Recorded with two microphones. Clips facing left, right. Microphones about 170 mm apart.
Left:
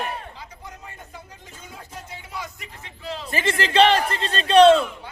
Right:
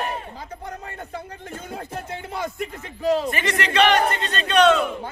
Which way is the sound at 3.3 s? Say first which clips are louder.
Left 2 dB; 30° left (ahead or behind).